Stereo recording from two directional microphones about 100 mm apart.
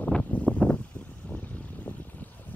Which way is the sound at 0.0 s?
15° left (ahead or behind).